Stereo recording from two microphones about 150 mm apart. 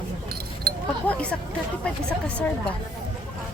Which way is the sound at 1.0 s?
10° left (ahead or behind).